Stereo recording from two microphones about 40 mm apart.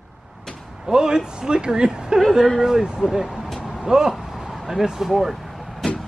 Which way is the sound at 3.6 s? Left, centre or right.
Centre.